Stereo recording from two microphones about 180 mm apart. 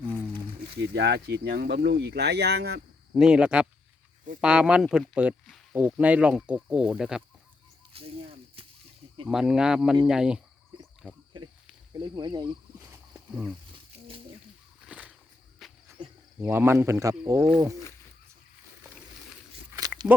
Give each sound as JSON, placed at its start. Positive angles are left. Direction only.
{"t": 0.8, "sound": "speech", "side_deg": -70}
{"t": 3.2, "sound": "speech", "side_deg": -5}
{"t": 7.9, "sound": "snake", "side_deg": -30}
{"t": 9.2, "sound": "speech", "side_deg": 0}
{"t": 12.1, "sound": "speech", "side_deg": -25}
{"t": 12.8, "sound": "wild animals", "side_deg": -10}
{"t": 14.8, "sound": "a sound", "side_deg": -5}
{"t": 15.6, "sound": "insect", "side_deg": 0}
{"t": 16.4, "sound": "speech", "side_deg": -15}
{"t": 20.1, "sound": "speech", "side_deg": -10}